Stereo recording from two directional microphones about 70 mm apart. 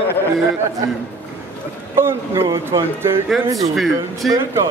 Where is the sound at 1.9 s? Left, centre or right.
Right.